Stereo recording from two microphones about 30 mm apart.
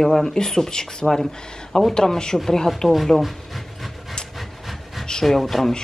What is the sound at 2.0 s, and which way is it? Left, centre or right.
Speech, left.